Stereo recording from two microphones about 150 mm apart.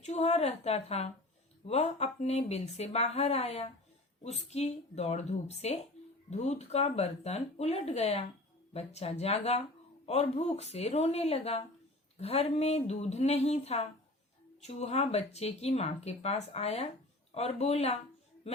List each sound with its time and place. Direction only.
0.0 s speech: 45° left (ahead or behind)